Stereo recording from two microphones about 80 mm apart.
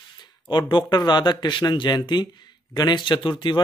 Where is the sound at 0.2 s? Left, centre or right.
Left.